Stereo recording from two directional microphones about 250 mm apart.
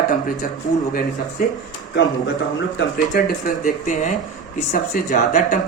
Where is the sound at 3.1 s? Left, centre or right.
Left.